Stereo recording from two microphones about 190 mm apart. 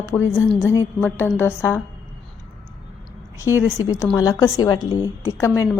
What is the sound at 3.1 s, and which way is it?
A woman's voice, 15° left (ahead or behind).